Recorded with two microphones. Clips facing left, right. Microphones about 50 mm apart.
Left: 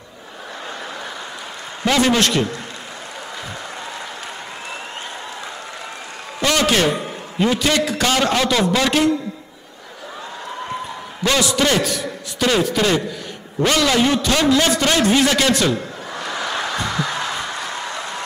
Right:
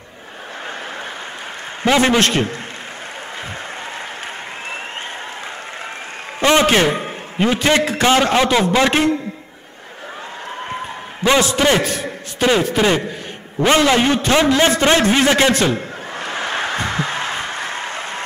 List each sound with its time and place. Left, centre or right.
1.9 s a man's voice: right
6.4 s a man's voice: right
11.2 s a man's voice: centre
11.6 s a man's voice: right
13.6 s a sound: right